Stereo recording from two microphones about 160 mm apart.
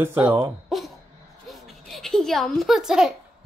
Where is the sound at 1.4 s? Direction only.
Centre (ahead or behind).